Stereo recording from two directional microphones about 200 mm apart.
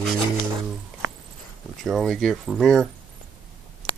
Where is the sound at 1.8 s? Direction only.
Centre (ahead or behind).